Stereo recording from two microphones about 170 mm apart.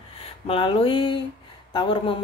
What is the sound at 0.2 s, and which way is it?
A woman's voice, 30° left (ahead or behind).